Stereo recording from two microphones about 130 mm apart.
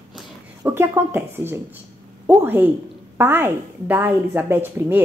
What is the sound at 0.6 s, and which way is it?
Speech, 20° right (ahead or behind).